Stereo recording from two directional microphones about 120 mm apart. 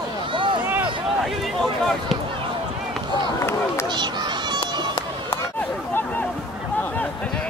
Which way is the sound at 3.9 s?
40° right (ahead or behind).